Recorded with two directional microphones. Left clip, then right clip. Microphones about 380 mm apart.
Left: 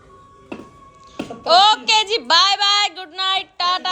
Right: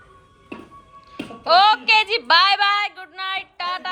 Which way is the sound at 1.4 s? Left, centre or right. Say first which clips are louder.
Left 1 dB; centre.